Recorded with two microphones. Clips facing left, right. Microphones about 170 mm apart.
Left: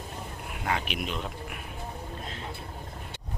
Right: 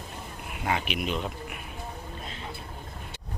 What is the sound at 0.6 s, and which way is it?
Speech, 5° right (ahead or behind).